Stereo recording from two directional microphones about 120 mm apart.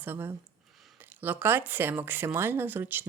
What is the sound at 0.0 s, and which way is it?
Speech, 15° right (ahead or behind).